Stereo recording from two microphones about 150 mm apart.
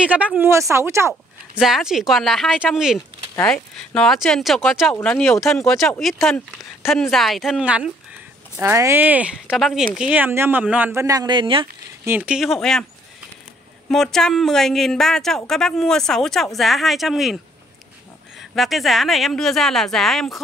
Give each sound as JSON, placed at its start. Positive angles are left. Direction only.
{"t": 0.0, "sound": "speech", "side_deg": -10}
{"t": 1.6, "sound": "speech", "side_deg": -5}
{"t": 3.3, "sound": "speech", "side_deg": 10}
{"t": 4.9, "sound": "speech", "side_deg": 10}
{"t": 12.0, "sound": "speech", "side_deg": -10}
{"t": 13.8, "sound": "speech", "side_deg": 5}
{"t": 18.4, "sound": "speech", "side_deg": 0}